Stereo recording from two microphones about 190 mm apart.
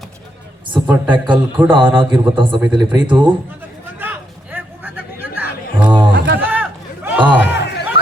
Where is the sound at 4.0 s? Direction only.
10° right (ahead or behind).